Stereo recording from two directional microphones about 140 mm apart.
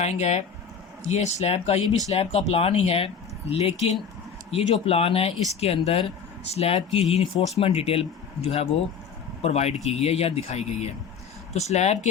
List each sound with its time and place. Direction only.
0.0 s speech: 55° left (ahead or behind)